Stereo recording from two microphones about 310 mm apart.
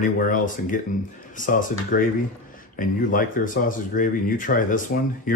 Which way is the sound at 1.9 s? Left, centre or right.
Left.